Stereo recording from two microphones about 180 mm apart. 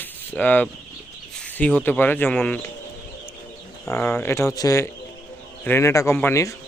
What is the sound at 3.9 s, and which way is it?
Speech, 15° left (ahead or behind).